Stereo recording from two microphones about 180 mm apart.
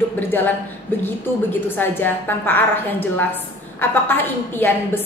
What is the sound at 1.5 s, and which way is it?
A woman's voice, 10° left (ahead or behind).